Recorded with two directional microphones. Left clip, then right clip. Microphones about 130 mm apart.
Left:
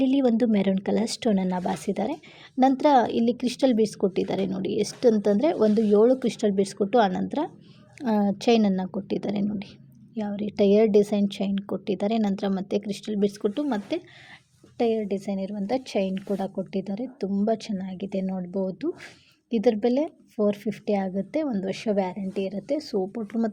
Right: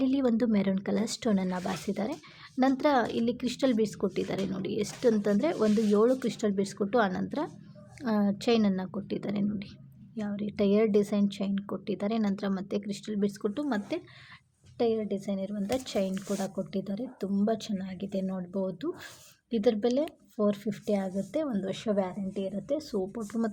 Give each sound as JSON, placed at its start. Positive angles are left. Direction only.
{"t": 0.0, "sound": "speech", "side_deg": 25}